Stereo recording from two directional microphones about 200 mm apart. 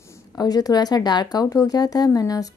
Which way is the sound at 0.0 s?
15° left (ahead or behind).